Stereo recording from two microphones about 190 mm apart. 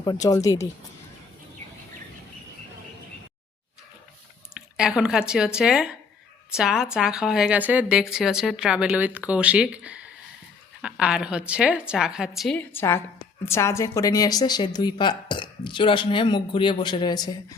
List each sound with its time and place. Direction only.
0.0 s speech: 20° left (ahead or behind)
4.8 s speech: 5° right (ahead or behind)
12.5 s a woman's voice: 10° left (ahead or behind)